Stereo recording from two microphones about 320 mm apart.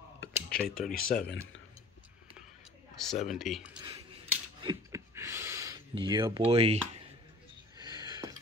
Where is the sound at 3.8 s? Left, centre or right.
Centre.